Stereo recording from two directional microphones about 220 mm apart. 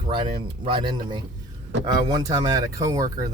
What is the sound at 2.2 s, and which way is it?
Speech, 20° right (ahead or behind).